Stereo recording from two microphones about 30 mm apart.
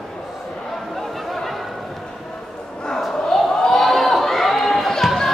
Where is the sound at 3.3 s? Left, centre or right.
Centre.